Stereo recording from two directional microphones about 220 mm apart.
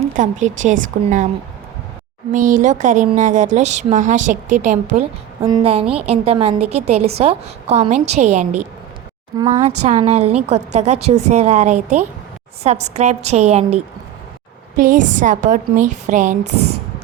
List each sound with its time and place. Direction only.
0.2 s a woman's voice: 35° right (ahead or behind)
2.3 s a woman's voice: 35° right (ahead or behind)
5.4 s a woman's voice: 20° right (ahead or behind)
5.8 s a woman's voice: 5° right (ahead or behind)
6.1 s a woman's voice: 30° right (ahead or behind)
9.5 s a woman's voice: 30° right (ahead or behind)